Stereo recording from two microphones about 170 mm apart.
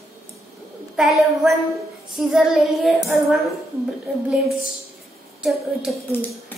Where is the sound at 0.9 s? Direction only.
Centre (ahead or behind).